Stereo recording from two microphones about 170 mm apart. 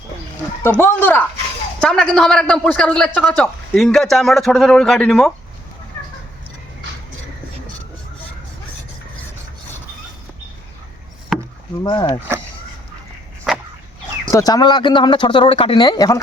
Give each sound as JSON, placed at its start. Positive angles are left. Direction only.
{"t": 0.6, "sound": "speech", "side_deg": 15}
{"t": 6.0, "sound": "a sound", "side_deg": 15}
{"t": 11.3, "sound": "rowboat", "side_deg": 0}
{"t": 11.8, "sound": "speech", "side_deg": 25}
{"t": 13.5, "sound": "dog", "side_deg": 0}
{"t": 14.3, "sound": "speech", "side_deg": 20}